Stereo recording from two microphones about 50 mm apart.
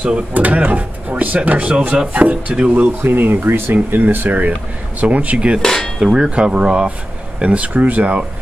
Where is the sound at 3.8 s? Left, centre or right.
Right.